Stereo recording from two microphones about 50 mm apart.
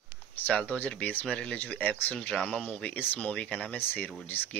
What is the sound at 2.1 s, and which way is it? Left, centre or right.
Speech, centre.